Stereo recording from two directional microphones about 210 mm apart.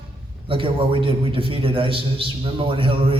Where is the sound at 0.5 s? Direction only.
25° right (ahead or behind).